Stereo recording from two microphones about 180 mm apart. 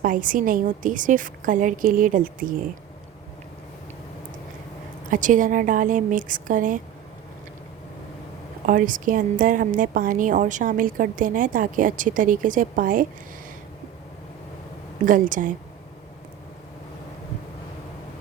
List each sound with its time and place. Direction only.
0.0 s a woman's voice: 50° right (ahead or behind)
5.1 s a woman's voice: 45° right (ahead or behind)
8.6 s a woman's voice: 50° right (ahead or behind)
15.0 s a woman's voice: 50° right (ahead or behind)